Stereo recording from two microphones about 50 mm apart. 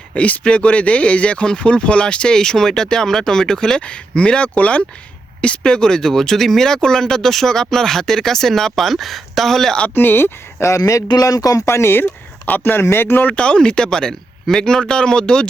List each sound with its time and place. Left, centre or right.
0.4 s speech: left
5.4 s speech: centre
9.9 s speech: left
10.6 s speech: left
11.5 s speech: left
12.5 s speech: left
12.8 s speech: left
13.3 s speech: left